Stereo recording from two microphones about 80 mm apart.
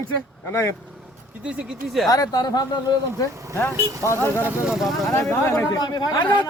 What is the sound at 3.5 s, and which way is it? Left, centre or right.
Speech, left.